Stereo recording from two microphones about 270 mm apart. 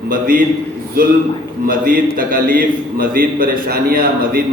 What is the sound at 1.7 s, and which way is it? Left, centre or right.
A man's voice, right.